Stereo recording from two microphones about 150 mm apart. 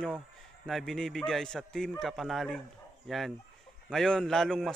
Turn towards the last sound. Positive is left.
turn(degrees=0)  # may be behind; listen again after turning